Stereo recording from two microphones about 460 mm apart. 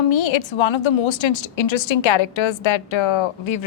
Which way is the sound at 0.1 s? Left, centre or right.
Left.